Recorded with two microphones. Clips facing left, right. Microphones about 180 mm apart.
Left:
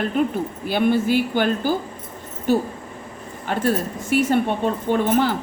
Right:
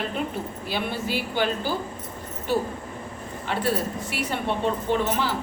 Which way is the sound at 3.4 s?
45° left (ahead or behind).